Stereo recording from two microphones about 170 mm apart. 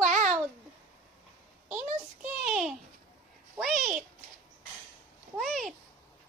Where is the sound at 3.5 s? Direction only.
Centre (ahead or behind).